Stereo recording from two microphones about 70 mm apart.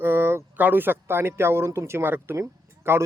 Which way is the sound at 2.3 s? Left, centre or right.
Right.